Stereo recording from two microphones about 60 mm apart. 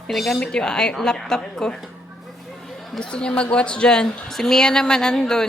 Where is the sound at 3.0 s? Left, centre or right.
Centre.